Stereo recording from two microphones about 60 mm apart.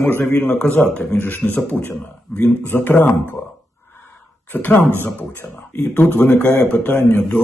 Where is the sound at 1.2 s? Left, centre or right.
Left.